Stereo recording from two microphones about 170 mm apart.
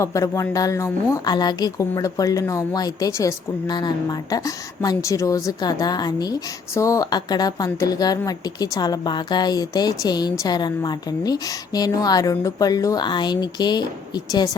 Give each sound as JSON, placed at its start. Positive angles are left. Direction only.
{"t": 0.0, "sound": "a woman's voice", "side_deg": 20}